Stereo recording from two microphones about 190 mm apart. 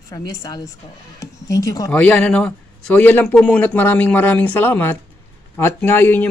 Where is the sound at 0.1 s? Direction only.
20° left (ahead or behind).